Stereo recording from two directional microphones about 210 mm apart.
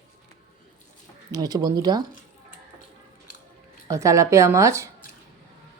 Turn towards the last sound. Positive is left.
turn(degrees=-15)  # may be behind; listen again after turning